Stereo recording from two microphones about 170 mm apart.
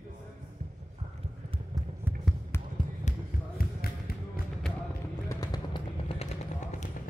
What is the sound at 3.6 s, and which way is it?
Music, 60° left (ahead or behind).